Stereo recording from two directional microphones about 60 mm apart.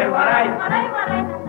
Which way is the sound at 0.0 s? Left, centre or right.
Right.